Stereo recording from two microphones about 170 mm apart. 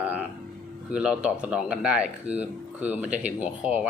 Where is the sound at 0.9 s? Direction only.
5° right (ahead or behind).